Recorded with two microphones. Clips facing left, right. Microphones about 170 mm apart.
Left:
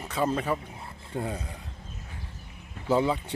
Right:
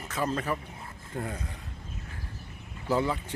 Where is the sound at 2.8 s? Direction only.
20° left (ahead or behind).